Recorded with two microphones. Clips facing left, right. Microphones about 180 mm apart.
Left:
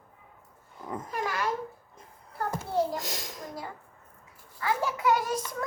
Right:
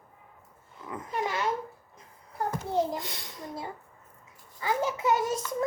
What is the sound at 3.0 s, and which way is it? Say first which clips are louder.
Speech: left 2 dB; 45° left (ahead or behind).